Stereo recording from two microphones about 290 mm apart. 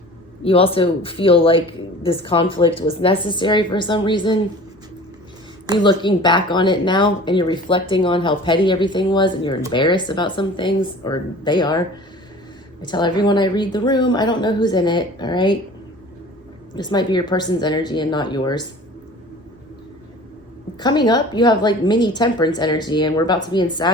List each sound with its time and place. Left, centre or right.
0.4 s speech: centre
5.7 s speech: centre
12.8 s speech: centre
16.7 s speech: centre
20.7 s speech: centre